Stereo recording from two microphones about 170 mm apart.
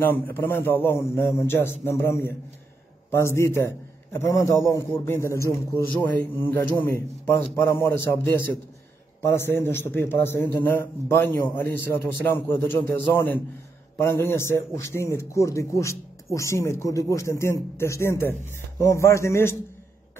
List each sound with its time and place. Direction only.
0.0 s a man's voice: 10° left (ahead or behind)